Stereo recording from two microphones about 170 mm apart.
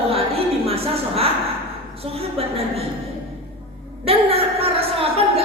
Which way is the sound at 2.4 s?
35° right (ahead or behind).